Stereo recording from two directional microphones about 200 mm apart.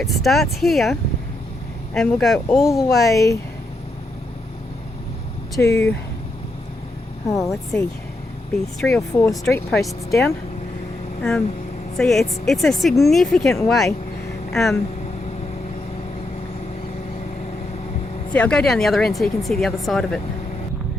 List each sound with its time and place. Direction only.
0.0 s speech: centre (ahead or behind)
3.1 s speech: 15° left (ahead or behind)
5.6 s speech: 10° left (ahead or behind)
7.3 s speech: 15° left (ahead or behind)
9.0 s speech: 15° left (ahead or behind)
11.2 s speech: 5° left (ahead or behind)
18.3 s speech: 5° left (ahead or behind)